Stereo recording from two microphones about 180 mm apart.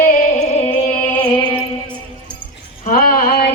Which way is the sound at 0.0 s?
45° left (ahead or behind).